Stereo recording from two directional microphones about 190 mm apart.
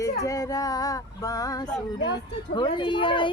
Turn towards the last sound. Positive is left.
turn(degrees=25)  # may be behind; listen again after turning